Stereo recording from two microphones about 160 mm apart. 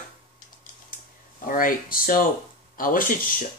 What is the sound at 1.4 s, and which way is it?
Speech, 60° left (ahead or behind).